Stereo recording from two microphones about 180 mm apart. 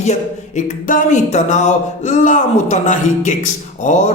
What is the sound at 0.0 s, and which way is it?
Speech, 40° left (ahead or behind).